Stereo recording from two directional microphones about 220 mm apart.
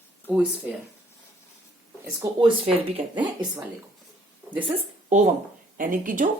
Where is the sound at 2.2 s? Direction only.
20° right (ahead or behind).